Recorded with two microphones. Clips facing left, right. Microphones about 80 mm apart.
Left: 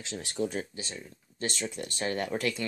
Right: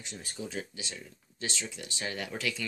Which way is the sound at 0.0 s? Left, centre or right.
Left.